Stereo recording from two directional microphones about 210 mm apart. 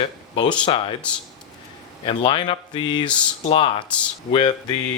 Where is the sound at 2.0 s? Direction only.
20° left (ahead or behind).